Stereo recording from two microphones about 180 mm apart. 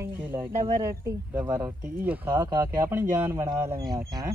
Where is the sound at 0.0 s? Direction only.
10° right (ahead or behind).